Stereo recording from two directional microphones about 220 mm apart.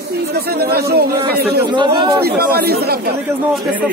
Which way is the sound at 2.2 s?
45° right (ahead or behind).